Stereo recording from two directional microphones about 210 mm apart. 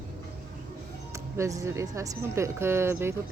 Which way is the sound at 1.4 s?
15° right (ahead or behind).